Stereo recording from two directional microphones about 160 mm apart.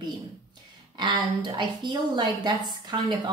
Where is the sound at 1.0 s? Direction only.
30° right (ahead or behind).